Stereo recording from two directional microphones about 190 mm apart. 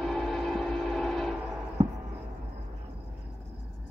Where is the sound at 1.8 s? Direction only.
25° right (ahead or behind).